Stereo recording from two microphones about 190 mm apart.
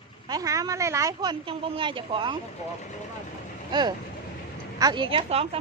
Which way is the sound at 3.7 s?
20° right (ahead or behind).